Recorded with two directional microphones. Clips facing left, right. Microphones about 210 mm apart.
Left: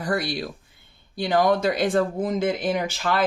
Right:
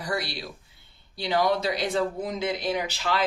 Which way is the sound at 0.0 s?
50° left (ahead or behind).